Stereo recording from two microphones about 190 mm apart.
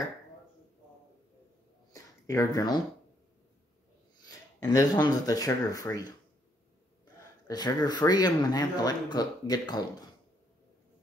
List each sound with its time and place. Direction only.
1.9 s a sound: 15° left (ahead or behind)
4.2 s speech: 20° left (ahead or behind)
7.4 s speech: 20° left (ahead or behind)